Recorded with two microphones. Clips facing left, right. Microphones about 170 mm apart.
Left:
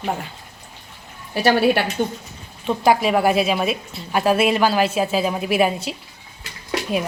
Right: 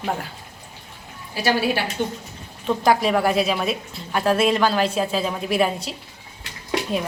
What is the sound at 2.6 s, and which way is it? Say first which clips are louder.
A woman's voice: left 1 dB; 5° left (ahead or behind).